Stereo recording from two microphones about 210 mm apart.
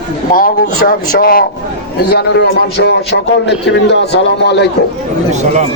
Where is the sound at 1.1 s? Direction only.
45° left (ahead or behind).